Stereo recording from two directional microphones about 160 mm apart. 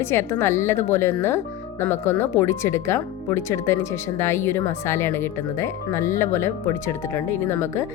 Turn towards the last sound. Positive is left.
turn(degrees=15)  # may be behind; listen again after turning